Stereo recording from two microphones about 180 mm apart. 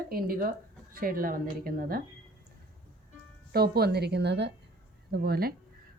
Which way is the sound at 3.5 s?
60° right (ahead or behind).